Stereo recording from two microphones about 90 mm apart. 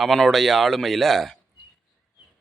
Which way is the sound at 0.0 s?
Centre (ahead or behind).